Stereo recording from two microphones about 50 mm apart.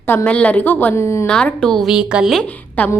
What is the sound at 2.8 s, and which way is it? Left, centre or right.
Speech, left.